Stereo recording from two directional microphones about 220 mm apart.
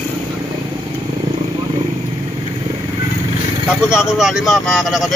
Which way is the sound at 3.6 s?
5° right (ahead or behind).